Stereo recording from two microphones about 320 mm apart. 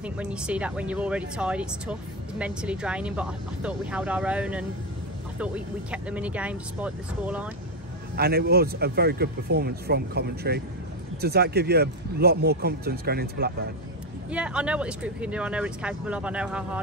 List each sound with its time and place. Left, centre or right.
0.0 s speech: centre
8.2 s speech: right
14.3 s speech: centre